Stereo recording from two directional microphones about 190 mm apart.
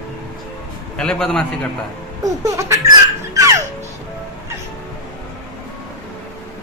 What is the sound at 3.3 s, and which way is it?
Music, 15° right (ahead or behind).